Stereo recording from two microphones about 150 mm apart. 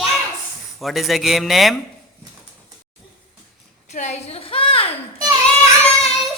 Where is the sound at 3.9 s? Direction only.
50° left (ahead or behind).